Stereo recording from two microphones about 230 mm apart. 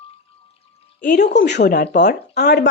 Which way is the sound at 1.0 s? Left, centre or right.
Left.